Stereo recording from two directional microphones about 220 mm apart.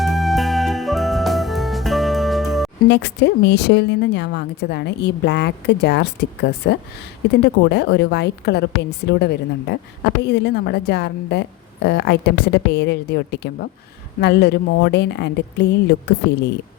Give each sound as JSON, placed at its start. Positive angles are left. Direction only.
{"t": 0.0, "sound": "music", "side_deg": 0}
{"t": 2.9, "sound": "a woman's voice", "side_deg": 50}